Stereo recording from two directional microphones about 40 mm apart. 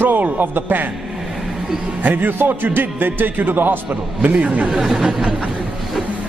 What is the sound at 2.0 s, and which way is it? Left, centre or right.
A man's voice, right.